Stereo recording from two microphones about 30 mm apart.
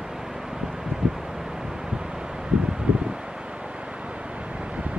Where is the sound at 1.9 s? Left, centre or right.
Right.